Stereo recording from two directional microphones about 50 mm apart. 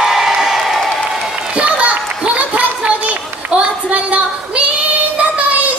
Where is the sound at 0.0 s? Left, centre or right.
Centre.